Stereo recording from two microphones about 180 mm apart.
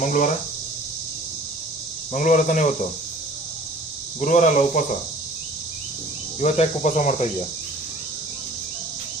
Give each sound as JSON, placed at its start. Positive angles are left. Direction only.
{"t": 0.0, "sound": "speech", "side_deg": 45}
{"t": 2.1, "sound": "speech", "side_deg": 45}
{"t": 4.2, "sound": "speech", "side_deg": 45}
{"t": 6.4, "sound": "speech", "side_deg": 40}